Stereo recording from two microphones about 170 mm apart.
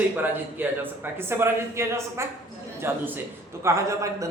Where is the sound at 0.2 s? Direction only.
10° right (ahead or behind).